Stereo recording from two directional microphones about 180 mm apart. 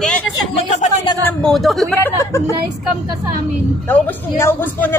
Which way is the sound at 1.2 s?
5° left (ahead or behind).